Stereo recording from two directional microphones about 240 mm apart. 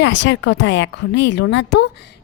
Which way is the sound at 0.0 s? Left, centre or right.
Left.